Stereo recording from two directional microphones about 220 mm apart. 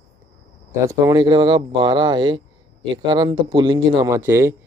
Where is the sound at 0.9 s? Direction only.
20° right (ahead or behind).